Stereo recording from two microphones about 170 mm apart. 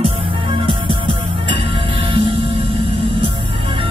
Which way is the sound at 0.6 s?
30° right (ahead or behind).